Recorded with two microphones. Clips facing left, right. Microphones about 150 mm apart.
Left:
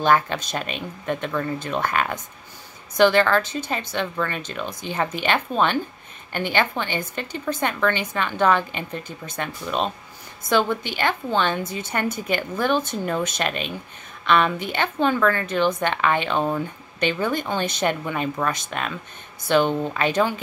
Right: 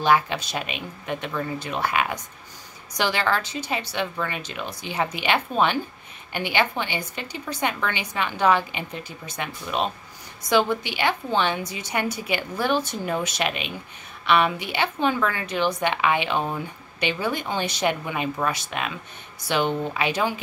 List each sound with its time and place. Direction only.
0.0 s speech: 10° right (ahead or behind)
3.3 s a woman's voice: 55° left (ahead or behind)
3.6 s speech: 10° right (ahead or behind)